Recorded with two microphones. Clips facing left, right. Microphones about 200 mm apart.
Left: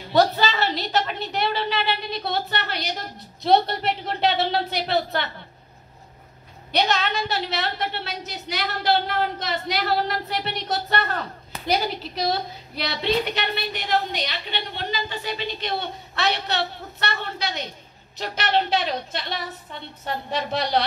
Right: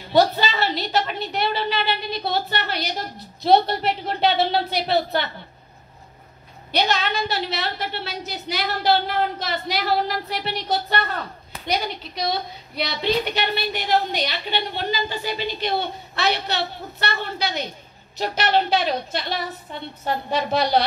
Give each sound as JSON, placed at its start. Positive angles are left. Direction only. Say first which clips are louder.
{"t": 0.1, "sound": "a woman's voice", "louder": "right 1 dB", "side_deg": 0}
{"t": 6.7, "sound": "a woman's voice", "louder": "even", "side_deg": 0}